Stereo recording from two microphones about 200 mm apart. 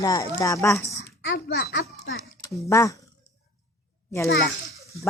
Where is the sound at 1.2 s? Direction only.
65° left (ahead or behind).